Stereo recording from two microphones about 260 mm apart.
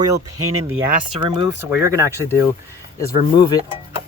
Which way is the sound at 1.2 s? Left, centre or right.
Centre.